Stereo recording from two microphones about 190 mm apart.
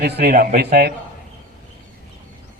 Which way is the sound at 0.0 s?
60° right (ahead or behind).